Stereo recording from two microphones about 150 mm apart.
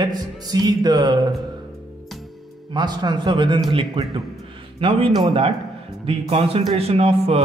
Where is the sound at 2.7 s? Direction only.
30° right (ahead or behind).